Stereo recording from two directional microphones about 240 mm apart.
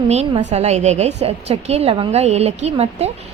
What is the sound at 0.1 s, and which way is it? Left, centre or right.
A woman's voice, right.